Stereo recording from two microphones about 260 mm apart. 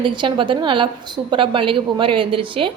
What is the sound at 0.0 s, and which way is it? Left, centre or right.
A woman's voice, centre.